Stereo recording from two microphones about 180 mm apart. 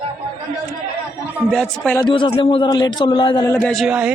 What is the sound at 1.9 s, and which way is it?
Speech, 25° left (ahead or behind).